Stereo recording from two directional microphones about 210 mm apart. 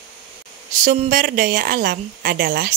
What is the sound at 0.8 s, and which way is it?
A woman's voice, 40° right (ahead or behind).